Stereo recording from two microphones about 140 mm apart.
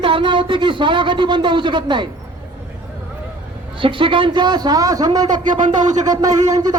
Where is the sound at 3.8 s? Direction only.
40° right (ahead or behind).